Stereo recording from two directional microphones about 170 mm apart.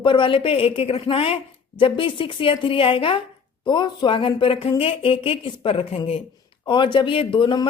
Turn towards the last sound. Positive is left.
turn(degrees=30)  # may be behind; listen again after turning